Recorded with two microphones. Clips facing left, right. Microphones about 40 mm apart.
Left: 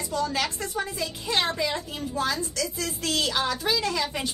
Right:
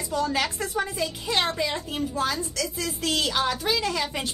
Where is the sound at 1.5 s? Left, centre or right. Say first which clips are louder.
Right 1 dB; centre.